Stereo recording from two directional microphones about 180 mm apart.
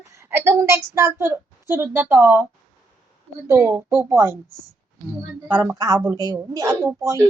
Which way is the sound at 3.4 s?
15° right (ahead or behind).